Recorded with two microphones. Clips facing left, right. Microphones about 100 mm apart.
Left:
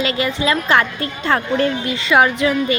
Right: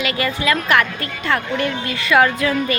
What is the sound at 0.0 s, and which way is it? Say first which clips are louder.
A woman's voice: left 2 dB; 25° left (ahead or behind).